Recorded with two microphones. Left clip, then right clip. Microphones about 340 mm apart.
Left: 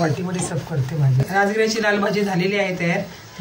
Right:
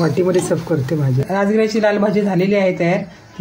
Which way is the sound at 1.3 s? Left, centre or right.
Centre.